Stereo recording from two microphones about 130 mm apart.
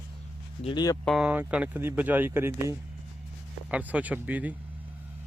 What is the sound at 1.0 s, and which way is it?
Speech, 5° right (ahead or behind).